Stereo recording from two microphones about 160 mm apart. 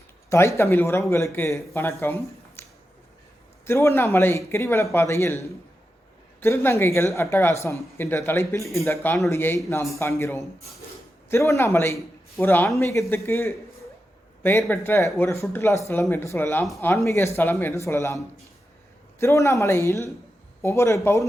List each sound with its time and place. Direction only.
0.3 s speech: 15° left (ahead or behind)
2.6 s a sound: 15° left (ahead or behind)
3.7 s speech: 15° left (ahead or behind)
19.2 s speech: 20° left (ahead or behind)